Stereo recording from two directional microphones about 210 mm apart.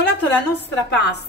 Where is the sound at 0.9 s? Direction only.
55° left (ahead or behind).